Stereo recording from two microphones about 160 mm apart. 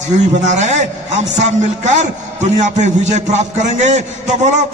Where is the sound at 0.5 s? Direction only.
45° right (ahead or behind).